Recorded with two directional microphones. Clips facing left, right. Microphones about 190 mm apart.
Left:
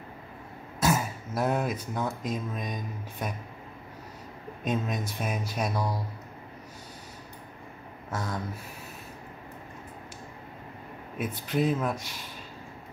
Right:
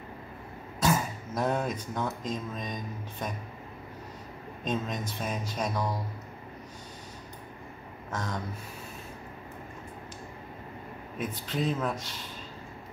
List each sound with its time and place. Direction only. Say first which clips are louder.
0.7 s speech: left 1 dB; 5° left (ahead or behind)
4.6 s speech: left 2 dB; 10° left (ahead or behind)
8.1 s speech: left 1 dB; 10° left (ahead or behind)
11.1 s speech: left 4 dB; 10° left (ahead or behind)